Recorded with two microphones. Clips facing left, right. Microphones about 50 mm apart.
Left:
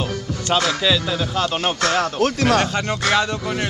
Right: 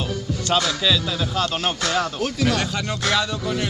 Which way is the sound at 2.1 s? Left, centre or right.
Left.